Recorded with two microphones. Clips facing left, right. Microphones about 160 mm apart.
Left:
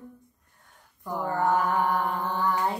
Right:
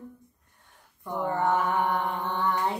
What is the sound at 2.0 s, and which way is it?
Mantra, 5° left (ahead or behind).